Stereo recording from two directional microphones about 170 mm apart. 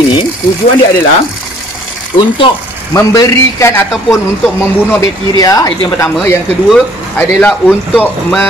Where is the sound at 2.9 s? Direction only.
20° left (ahead or behind).